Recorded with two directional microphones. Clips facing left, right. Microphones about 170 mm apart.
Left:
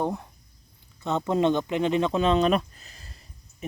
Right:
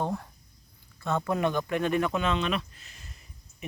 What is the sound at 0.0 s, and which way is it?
Speech, 15° left (ahead or behind).